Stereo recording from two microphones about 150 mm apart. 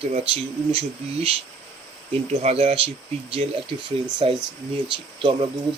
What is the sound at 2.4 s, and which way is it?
Speech, 40° right (ahead or behind).